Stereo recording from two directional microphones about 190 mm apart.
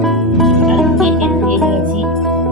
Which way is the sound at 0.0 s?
Centre (ahead or behind).